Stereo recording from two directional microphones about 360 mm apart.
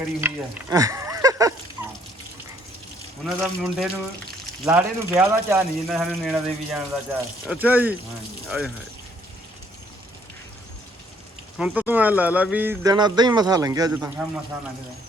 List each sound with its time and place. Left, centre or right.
0.2 s frying: centre
3.2 s speech: centre
11.5 s speech: centre